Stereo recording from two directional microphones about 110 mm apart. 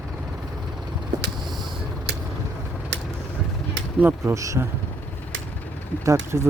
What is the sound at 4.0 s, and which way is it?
Speech, 15° right (ahead or behind).